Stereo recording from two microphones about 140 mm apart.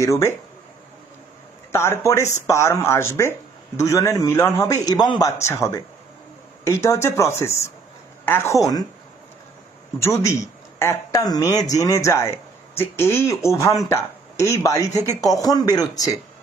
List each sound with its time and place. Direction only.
0.0 s speech: 20° left (ahead or behind)
1.7 s speech: 20° left (ahead or behind)
4.8 s speech: 30° left (ahead or behind)
5.4 s speech: 20° left (ahead or behind)
10.0 s speech: 20° left (ahead or behind)